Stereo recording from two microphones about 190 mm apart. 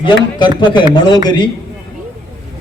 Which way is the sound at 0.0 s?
25° left (ahead or behind).